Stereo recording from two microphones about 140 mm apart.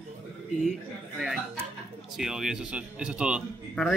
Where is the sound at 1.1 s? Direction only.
5° right (ahead or behind).